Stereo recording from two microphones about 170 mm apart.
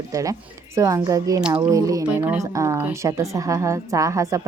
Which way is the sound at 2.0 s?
10° right (ahead or behind).